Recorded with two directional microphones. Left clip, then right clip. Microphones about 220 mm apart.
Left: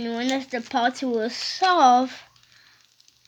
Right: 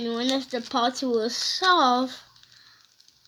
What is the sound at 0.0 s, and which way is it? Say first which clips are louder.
A woman's voice: even; 25° left (ahead or behind).